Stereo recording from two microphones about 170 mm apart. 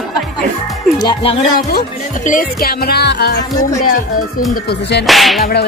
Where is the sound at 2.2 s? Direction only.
55° left (ahead or behind); by 3.4 s 80° left.